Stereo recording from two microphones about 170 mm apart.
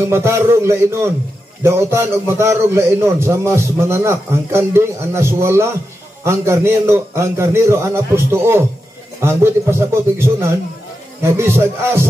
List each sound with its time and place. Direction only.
0.1 s a man's voice: 15° right (ahead or behind)